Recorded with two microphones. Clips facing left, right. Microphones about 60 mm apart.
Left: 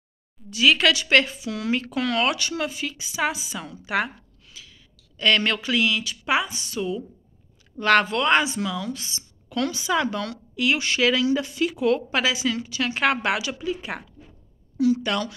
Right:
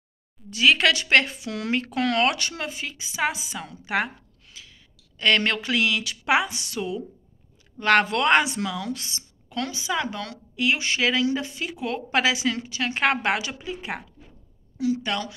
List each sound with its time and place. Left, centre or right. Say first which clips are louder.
0.5 s a woman's voice: even; right
1.1 s speech: left 1 dB; right
2.5 s a woman's voice: left 4 dB; right
7.8 s a woman's voice: left 1 dB; right
8.1 s speech: right 1 dB; right
9.5 s a woman's voice: left 4 dB; right
12.1 s a woman's voice: right 1 dB; right
12.7 s a woman's voice: left 1 dB; right